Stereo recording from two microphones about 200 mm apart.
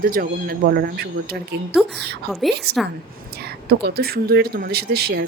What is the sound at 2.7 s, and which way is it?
A child's voice, 55° right (ahead or behind).